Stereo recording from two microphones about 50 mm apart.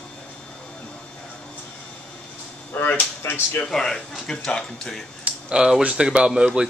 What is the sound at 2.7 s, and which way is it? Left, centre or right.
Speech, left.